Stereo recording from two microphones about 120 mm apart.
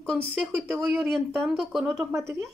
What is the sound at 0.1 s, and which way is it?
Speech, 10° right (ahead or behind).